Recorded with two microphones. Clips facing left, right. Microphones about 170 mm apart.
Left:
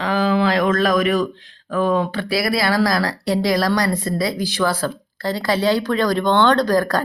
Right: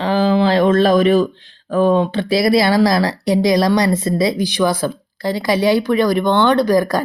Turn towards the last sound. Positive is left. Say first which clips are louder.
# right 3 dB
turn(degrees=-10)  # may be behind; listen again after turning